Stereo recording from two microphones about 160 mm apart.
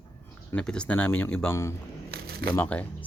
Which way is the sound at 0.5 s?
5° left (ahead or behind).